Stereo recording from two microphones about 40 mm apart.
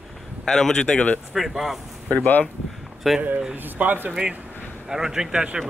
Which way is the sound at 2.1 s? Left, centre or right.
Left.